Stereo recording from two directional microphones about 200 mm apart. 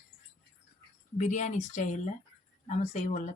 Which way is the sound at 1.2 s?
40° left (ahead or behind).